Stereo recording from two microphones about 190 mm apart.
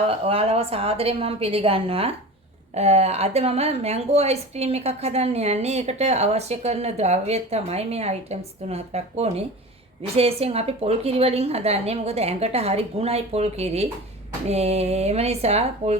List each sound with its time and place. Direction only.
0.1 s a woman's voice: 30° right (ahead or behind)